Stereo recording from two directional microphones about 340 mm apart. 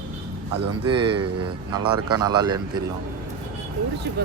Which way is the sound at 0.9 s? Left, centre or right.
Centre.